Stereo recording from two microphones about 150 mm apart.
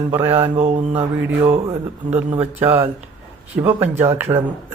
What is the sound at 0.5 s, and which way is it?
Mantra, 45° right (ahead or behind).